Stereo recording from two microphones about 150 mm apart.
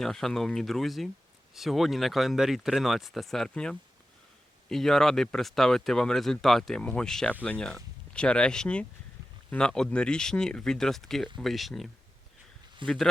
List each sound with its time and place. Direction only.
0.0 s speech: centre (ahead or behind)
12.8 s a man's voice: 35° right (ahead or behind)